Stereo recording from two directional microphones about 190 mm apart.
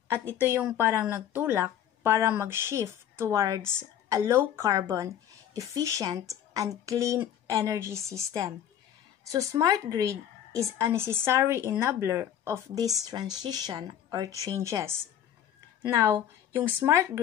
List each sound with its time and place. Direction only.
0.4 s speech: 10° right (ahead or behind)
16.0 s speech: 15° right (ahead or behind)